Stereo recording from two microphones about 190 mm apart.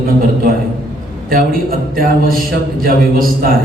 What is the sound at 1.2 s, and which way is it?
A man's voice, 50° right (ahead or behind).